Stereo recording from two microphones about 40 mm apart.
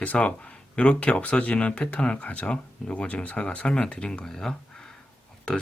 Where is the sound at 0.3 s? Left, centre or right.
Left.